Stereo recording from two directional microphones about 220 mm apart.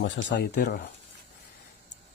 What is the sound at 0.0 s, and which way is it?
Speech, 55° left (ahead or behind).